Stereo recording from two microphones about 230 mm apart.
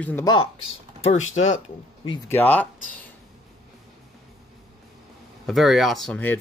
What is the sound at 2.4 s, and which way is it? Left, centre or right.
Speech, centre.